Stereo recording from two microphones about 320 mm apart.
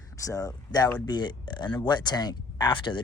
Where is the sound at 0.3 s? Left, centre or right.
Centre.